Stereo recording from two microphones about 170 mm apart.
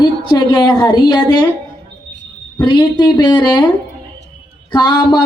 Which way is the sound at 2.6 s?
25° left (ahead or behind).